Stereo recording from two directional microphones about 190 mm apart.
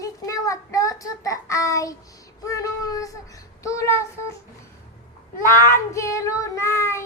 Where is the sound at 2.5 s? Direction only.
20° left (ahead or behind).